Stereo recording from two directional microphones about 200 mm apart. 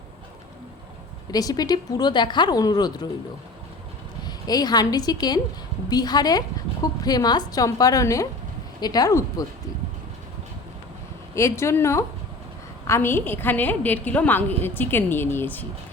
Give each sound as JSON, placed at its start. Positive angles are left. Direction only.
{"t": 1.3, "sound": "speech", "side_deg": 20}
{"t": 4.2, "sound": "a woman's voice", "side_deg": 20}
{"t": 11.3, "sound": "a woman's voice", "side_deg": 15}